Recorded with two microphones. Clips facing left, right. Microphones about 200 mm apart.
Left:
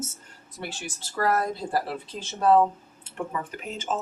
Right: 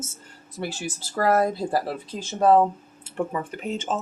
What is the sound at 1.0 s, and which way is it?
Speech, 40° right (ahead or behind).